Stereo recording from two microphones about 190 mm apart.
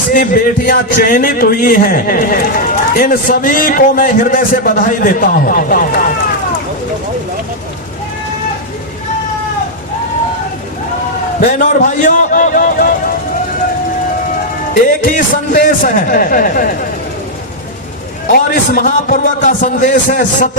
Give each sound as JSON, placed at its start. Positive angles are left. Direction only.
{"t": 0.1, "sound": "a man's voice", "side_deg": 45}
{"t": 11.3, "sound": "a man's voice", "side_deg": 45}
{"t": 14.7, "sound": "a man's voice", "side_deg": 45}
{"t": 18.3, "sound": "a man's voice", "side_deg": 50}